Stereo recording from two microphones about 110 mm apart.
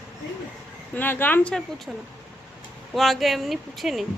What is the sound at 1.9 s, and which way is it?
Speech, 5° right (ahead or behind).